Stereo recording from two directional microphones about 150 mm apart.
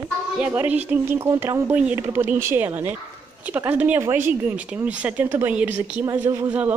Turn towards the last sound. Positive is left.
turn(degrees=-10)  # may be behind; listen again after turning